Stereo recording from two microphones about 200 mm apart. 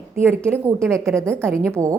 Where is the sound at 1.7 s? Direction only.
15° right (ahead or behind).